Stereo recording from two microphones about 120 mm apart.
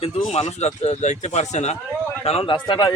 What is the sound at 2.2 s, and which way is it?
Speech, 50° left (ahead or behind).